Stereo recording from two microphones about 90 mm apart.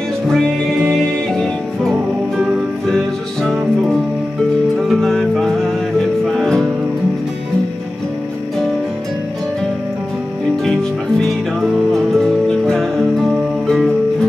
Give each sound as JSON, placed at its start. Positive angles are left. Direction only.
{"t": 0.3, "sound": "music", "side_deg": 5}
{"t": 4.7, "sound": "music", "side_deg": 0}
{"t": 10.6, "sound": "music", "side_deg": 5}